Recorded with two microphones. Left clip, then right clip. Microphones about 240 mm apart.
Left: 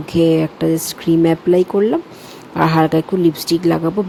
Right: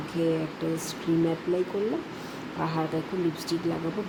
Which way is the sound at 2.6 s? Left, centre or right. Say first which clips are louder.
Left 16 dB; left.